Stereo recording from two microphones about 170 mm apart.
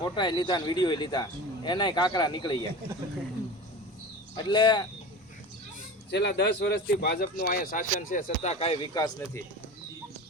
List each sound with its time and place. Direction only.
0.0 s speech: 25° left (ahead or behind)
4.4 s speech: 25° left (ahead or behind)
6.1 s speech: 80° left; by 9.4 s 25° left (ahead or behind)